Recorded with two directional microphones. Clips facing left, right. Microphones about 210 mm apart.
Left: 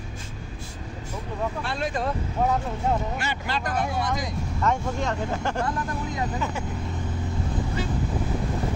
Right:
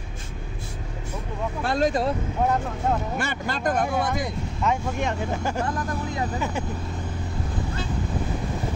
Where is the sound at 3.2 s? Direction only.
50° right (ahead or behind).